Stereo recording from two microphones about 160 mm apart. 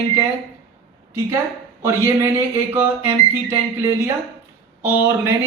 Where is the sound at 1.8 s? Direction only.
15° right (ahead or behind).